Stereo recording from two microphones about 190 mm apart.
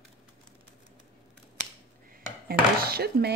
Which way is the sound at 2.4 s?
55° right (ahead or behind).